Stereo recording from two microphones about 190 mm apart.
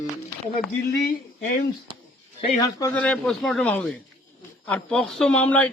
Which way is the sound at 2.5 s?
20° left (ahead or behind).